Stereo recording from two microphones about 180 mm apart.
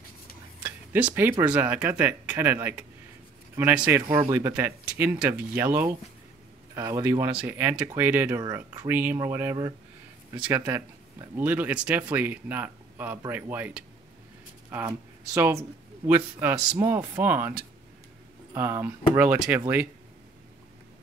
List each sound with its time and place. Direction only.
0.7 s a sound: 10° right (ahead or behind)
1.4 s speech: 5° right (ahead or behind)
14.9 s speech: 15° right (ahead or behind)